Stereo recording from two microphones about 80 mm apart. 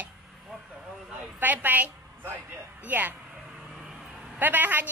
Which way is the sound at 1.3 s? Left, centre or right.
Right.